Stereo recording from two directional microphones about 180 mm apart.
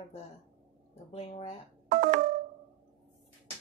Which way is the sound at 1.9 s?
50° right (ahead or behind).